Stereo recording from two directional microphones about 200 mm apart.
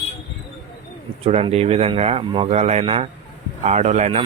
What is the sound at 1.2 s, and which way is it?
Speech, 30° right (ahead or behind).